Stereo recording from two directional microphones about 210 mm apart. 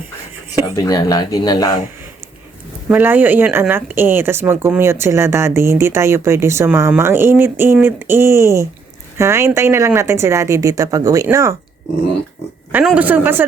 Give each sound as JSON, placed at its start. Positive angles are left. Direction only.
{"t": 0.9, "sound": "speech", "side_deg": 15}
{"t": 2.9, "sound": "speech", "side_deg": -10}
{"t": 12.7, "sound": "speech", "side_deg": -5}